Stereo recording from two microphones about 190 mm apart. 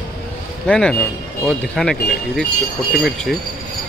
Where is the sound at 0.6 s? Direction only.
5° left (ahead or behind).